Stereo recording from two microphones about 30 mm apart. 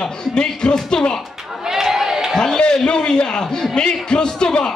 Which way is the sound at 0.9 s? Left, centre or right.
Left.